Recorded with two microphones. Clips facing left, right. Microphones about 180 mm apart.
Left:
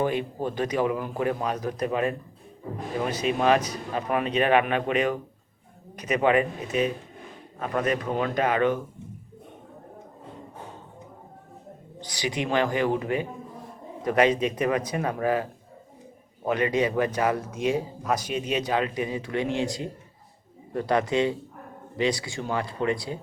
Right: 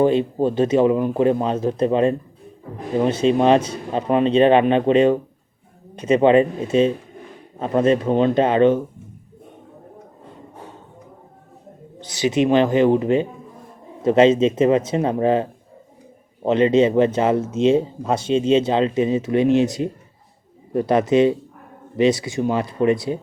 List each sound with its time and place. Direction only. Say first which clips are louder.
0.0 s speech: right 9 dB; 25° right (ahead or behind)
11.9 s speech: right 11 dB; 25° right (ahead or behind)